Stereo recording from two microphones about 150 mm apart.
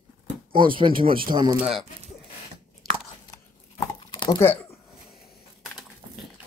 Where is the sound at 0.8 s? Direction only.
35° right (ahead or behind).